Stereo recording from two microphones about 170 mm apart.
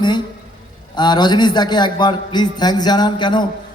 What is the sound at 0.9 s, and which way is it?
A man's voice, 25° left (ahead or behind).